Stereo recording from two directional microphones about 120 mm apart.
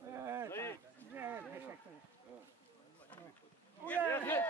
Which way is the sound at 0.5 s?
20° left (ahead or behind).